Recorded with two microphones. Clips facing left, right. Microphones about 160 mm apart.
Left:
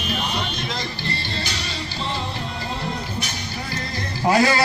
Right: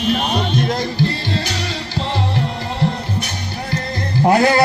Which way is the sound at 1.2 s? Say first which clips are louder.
Right 7 dB; 90° right.